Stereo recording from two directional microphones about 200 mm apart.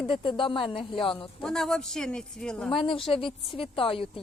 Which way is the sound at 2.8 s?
25° left (ahead or behind).